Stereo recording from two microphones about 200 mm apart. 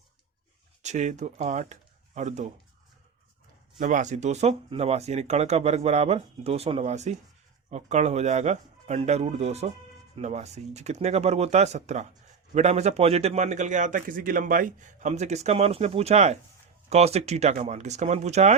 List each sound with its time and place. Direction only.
0.8 s speech: 35° right (ahead or behind)
3.8 s a man's voice: 40° right (ahead or behind)